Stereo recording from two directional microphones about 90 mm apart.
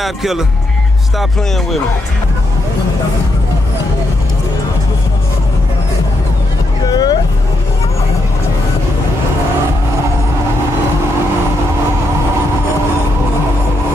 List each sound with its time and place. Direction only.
0.0 s speech: 5° right (ahead or behind)
6.9 s vehicle: 50° left (ahead or behind)